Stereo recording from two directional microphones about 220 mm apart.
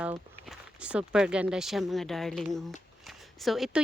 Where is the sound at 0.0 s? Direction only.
5° right (ahead or behind).